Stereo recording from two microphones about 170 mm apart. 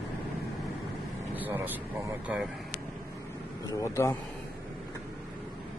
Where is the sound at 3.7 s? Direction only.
15° left (ahead or behind).